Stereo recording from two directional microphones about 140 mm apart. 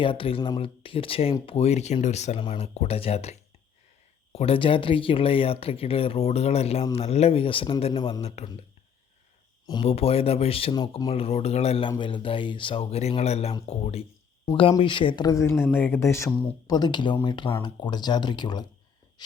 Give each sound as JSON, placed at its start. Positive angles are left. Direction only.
{"t": 0.0, "sound": "speech", "side_deg": 40}
{"t": 9.8, "sound": "speech", "side_deg": 45}
{"t": 11.1, "sound": "speech", "side_deg": 45}
{"t": 11.9, "sound": "speech", "side_deg": 35}